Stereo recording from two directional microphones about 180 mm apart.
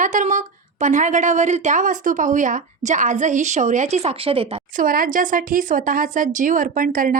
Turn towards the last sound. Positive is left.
turn(degrees=-50)  # may be behind; listen again after turning